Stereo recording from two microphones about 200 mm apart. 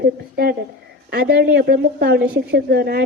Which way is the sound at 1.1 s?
50° right (ahead or behind).